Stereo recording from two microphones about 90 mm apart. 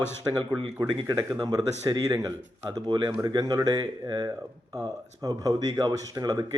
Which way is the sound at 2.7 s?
55° right (ahead or behind).